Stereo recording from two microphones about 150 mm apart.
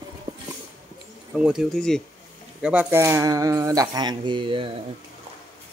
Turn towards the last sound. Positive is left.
turn(degrees=-35)  # may be behind; listen again after turning